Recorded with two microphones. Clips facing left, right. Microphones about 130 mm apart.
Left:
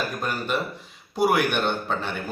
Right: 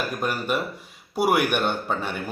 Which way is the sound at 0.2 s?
10° right (ahead or behind).